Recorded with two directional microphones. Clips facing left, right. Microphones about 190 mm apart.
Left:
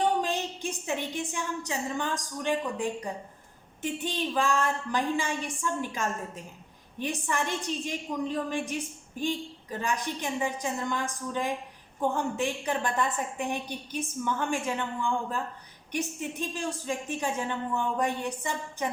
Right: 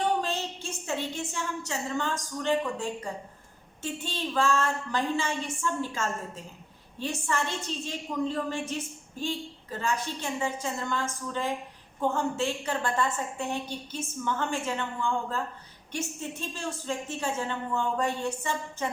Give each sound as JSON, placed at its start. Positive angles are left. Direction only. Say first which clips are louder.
{"t": 0.2, "sound": "a woman's voice", "louder": "left 2 dB", "side_deg": 15}